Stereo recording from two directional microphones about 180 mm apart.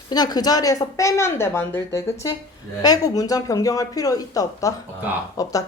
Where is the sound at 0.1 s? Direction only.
20° left (ahead or behind).